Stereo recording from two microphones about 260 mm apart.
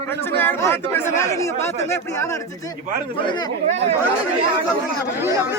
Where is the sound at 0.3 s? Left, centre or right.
Centre.